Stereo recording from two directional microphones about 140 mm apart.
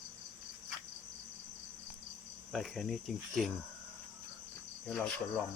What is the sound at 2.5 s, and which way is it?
Speech, centre (ahead or behind).